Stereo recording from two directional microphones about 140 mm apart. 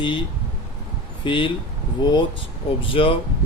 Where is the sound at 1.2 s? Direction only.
35° left (ahead or behind).